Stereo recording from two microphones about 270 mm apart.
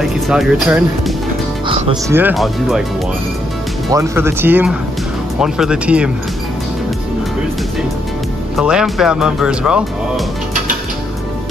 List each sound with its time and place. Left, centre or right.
0.0 s speech: centre
1.7 s speech: centre
2.1 s speech: centre
3.9 s speech: centre
8.5 s speech: centre